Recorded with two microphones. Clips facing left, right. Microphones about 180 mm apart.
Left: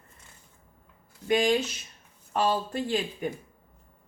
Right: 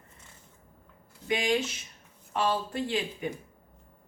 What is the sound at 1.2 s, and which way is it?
A woman's voice, 45° left (ahead or behind).